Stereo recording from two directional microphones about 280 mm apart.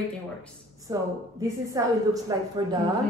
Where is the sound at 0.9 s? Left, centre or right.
Centre.